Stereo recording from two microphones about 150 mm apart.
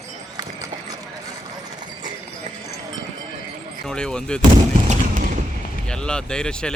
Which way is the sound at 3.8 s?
5° left (ahead or behind).